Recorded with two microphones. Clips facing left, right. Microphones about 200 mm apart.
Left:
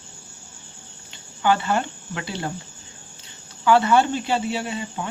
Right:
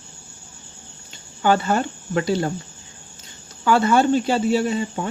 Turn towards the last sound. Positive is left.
turn(degrees=-40)  # may be behind; listen again after turning